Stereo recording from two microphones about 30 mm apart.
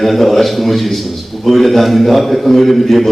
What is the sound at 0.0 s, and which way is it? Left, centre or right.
A man's voice, centre.